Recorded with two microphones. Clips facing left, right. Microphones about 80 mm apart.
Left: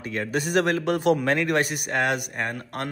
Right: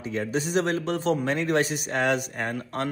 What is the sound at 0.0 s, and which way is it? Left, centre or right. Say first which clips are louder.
Speech: even; left.